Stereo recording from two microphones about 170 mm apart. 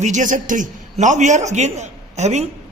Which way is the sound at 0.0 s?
50° right (ahead or behind).